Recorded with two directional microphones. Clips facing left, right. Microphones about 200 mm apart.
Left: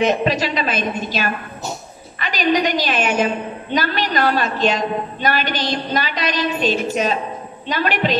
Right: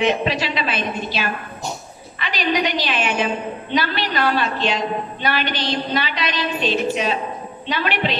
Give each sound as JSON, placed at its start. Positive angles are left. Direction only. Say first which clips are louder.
{"t": 0.0, "sound": "a woman's voice", "louder": "left 2 dB", "side_deg": 45}